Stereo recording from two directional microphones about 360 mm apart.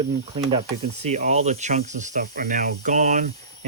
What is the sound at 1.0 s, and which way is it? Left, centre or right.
Speech, centre.